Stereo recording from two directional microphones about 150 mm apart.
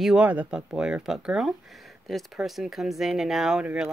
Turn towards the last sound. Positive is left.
turn(degrees=-5)  # may be behind; listen again after turning